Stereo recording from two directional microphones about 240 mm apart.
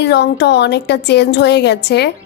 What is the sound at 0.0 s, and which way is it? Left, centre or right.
A woman's voice, left.